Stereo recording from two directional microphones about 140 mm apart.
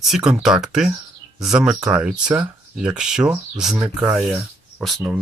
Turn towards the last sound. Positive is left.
turn(degrees=0)  # may be behind; listen again after turning